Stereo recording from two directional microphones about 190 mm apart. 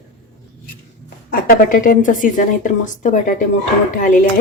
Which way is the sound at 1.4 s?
45° left (ahead or behind).